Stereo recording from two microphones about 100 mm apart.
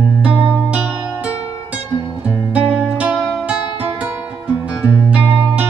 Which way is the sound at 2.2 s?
10° right (ahead or behind).